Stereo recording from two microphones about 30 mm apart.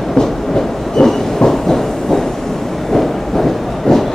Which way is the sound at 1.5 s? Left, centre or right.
Centre.